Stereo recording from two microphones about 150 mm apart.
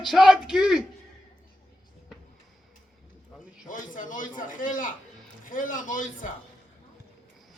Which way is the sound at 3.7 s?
60° left (ahead or behind).